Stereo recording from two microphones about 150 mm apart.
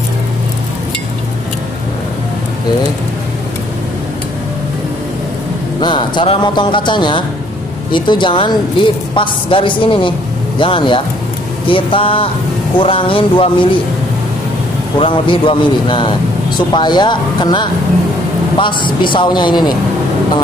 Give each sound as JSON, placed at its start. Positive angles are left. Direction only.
{"t": 5.8, "sound": "a man's voice", "side_deg": 30}
{"t": 15.0, "sound": "a man's voice", "side_deg": 35}